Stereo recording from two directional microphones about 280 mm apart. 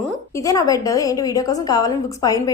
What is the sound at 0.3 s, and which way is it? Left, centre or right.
A woman's voice, centre.